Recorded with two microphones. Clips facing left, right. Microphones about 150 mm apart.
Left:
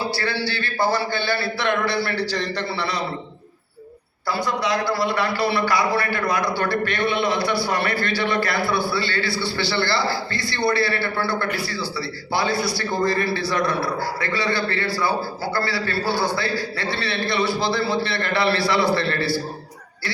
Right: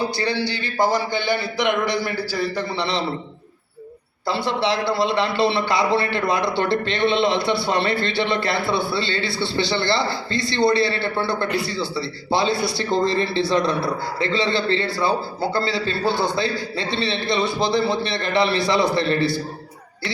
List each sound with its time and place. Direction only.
0.0 s a man's voice: 20° right (ahead or behind)
2.7 s speech: 25° right (ahead or behind)
4.3 s speech: 25° right (ahead or behind)